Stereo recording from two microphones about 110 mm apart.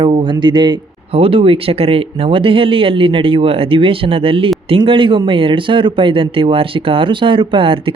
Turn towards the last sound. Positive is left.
turn(degrees=-55)  # may be behind; listen again after turning